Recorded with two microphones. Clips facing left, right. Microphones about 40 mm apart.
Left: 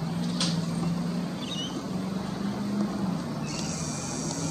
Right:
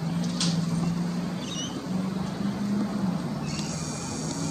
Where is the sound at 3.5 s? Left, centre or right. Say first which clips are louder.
Right 1 dB; right.